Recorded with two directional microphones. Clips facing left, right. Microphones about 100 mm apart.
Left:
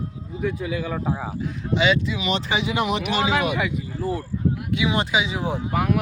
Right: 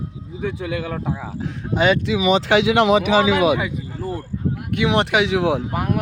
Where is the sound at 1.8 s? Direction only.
50° right (ahead or behind).